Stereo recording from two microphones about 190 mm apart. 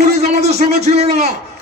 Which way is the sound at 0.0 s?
35° right (ahead or behind).